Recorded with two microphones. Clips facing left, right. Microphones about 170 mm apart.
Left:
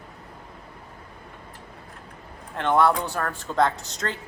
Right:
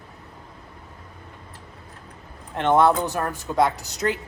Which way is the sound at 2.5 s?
20° right (ahead or behind).